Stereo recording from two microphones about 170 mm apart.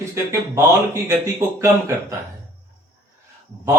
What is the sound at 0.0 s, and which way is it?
Speech, 15° right (ahead or behind).